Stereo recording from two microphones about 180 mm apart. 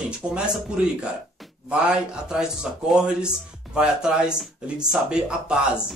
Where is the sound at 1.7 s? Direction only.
5° right (ahead or behind).